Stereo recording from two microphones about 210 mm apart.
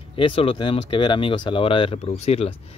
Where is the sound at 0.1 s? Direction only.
25° left (ahead or behind).